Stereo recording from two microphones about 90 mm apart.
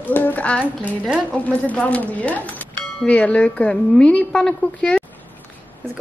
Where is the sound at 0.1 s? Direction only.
20° left (ahead or behind).